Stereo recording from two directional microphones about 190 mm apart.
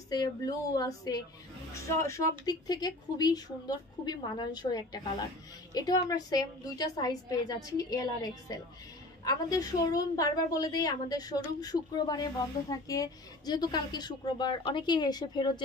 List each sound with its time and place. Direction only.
0.1 s speech: 20° left (ahead or behind)